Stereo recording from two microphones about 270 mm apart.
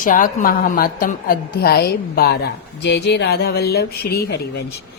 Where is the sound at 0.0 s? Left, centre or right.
Left.